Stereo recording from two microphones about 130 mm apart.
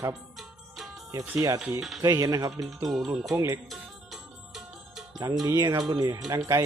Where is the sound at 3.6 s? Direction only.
Centre (ahead or behind).